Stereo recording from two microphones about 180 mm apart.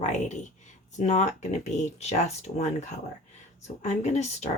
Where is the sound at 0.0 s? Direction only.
40° left (ahead or behind).